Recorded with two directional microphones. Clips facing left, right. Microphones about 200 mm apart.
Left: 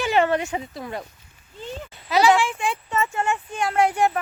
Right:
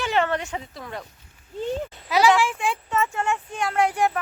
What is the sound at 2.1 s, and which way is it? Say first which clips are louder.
Speech: left 1 dB; 10° right (ahead or behind).